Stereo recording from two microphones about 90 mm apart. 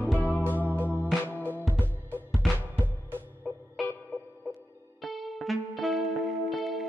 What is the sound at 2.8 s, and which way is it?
Music, 20° right (ahead or behind).